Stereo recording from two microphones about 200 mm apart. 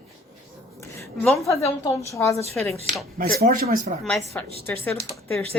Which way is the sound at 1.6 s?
15° left (ahead or behind).